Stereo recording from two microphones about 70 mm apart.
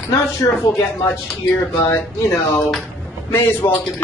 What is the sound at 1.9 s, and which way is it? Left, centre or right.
Speech, left.